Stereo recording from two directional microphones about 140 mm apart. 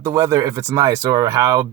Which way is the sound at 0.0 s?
25° right (ahead or behind).